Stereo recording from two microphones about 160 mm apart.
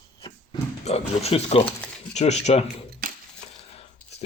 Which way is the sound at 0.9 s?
40° left (ahead or behind).